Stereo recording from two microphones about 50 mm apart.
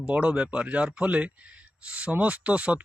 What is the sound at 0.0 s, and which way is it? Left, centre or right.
Speech, right.